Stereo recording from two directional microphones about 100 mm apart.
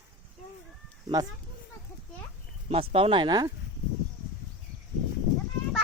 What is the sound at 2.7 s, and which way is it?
Speech, 70° right (ahead or behind).